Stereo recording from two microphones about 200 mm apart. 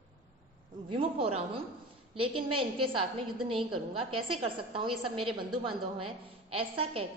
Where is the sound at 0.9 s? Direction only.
25° right (ahead or behind).